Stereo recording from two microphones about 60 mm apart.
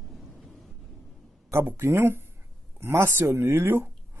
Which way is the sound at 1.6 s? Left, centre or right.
Right.